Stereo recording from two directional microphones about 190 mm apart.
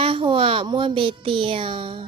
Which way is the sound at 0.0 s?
25° right (ahead or behind).